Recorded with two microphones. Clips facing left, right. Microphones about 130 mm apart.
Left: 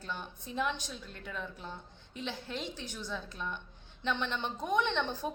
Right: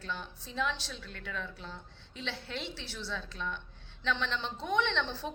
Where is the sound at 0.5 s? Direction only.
55° left (ahead or behind).